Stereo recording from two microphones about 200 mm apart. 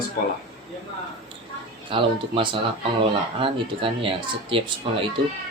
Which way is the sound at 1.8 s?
25° right (ahead or behind).